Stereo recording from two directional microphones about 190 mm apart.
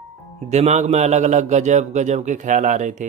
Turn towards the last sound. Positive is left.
turn(degrees=-40)  # may be behind; listen again after turning